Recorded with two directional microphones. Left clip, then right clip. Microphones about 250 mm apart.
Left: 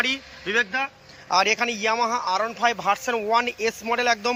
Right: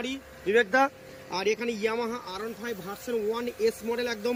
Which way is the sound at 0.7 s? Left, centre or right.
Centre.